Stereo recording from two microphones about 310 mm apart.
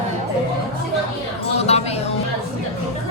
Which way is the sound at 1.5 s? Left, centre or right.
Centre.